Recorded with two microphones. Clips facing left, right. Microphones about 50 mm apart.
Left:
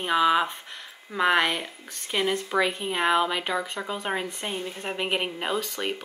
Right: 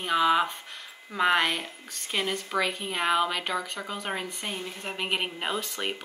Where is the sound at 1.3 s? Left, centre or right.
Centre.